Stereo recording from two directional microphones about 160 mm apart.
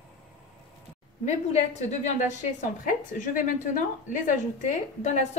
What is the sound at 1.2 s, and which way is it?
A woman's voice, 45° left (ahead or behind).